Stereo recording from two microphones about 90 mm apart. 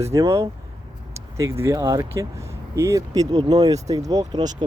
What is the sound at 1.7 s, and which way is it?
Speech, 40° right (ahead or behind).